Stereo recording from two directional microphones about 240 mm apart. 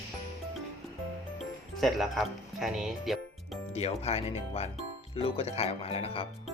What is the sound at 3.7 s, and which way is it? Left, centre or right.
Speech, left.